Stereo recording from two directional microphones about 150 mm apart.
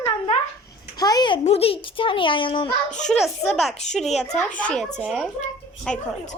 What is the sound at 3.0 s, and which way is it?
A child's voice, centre (ahead or behind).